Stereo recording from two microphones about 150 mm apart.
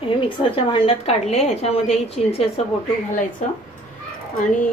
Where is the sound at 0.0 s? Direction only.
35° left (ahead or behind).